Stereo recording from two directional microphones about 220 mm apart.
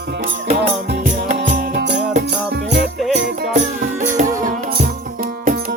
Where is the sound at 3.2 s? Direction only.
45° right (ahead or behind).